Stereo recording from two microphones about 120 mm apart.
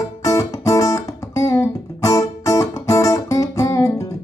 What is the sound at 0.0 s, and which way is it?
Guitar, 25° left (ahead or behind).